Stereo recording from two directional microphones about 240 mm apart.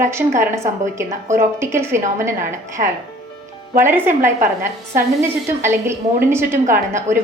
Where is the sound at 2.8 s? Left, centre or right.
Right.